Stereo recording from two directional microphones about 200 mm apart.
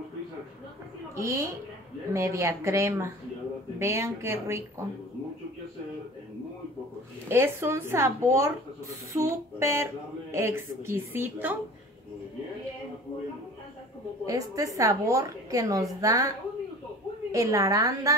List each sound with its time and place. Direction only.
1.1 s a woman's voice: 15° right (ahead or behind)
7.2 s a woman's voice: 10° right (ahead or behind)
14.2 s a woman's voice: 15° right (ahead or behind)